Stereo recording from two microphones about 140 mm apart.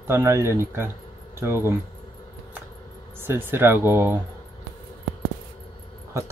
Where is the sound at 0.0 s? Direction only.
20° right (ahead or behind).